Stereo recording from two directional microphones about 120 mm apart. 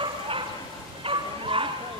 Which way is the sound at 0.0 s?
45° right (ahead or behind).